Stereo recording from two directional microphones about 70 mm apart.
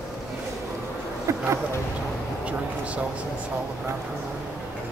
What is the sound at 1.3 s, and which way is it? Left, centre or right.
Speech, right.